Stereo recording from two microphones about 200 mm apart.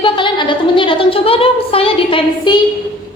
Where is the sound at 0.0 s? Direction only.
25° left (ahead or behind).